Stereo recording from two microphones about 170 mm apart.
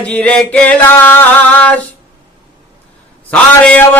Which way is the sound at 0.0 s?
5° left (ahead or behind).